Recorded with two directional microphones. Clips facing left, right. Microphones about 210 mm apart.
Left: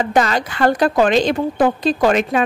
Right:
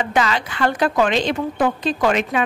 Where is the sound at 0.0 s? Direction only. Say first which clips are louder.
Left 3 dB; 40° left (ahead or behind).